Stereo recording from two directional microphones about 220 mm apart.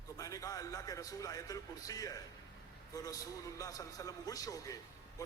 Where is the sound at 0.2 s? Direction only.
15° left (ahead or behind).